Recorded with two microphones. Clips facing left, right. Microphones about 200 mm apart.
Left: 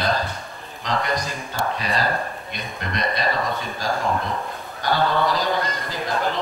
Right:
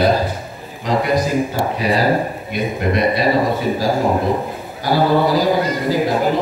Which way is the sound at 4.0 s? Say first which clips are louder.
Right 8 dB; 30° right (ahead or behind).